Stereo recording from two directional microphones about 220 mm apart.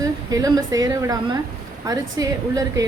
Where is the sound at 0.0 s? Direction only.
15° right (ahead or behind).